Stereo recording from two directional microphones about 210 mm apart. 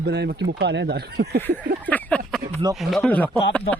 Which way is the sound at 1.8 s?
10° left (ahead or behind).